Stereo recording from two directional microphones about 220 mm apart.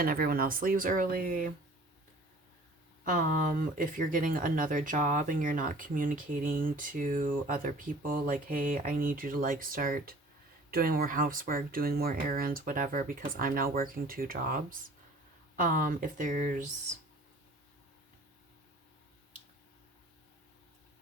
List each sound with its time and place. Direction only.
0.0 s speech: 40° right (ahead or behind)
3.0 s speech: 35° right (ahead or behind)